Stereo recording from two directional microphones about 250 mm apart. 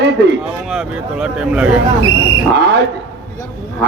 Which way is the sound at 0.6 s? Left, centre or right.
Centre.